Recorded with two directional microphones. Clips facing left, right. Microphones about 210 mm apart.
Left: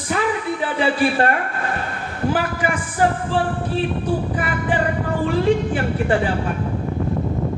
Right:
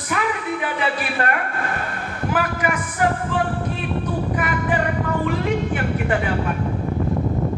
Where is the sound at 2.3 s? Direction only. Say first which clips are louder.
Left 1 dB; 30° left (ahead or behind).